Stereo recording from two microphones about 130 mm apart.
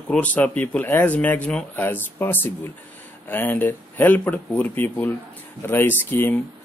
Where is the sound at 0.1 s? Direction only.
10° left (ahead or behind).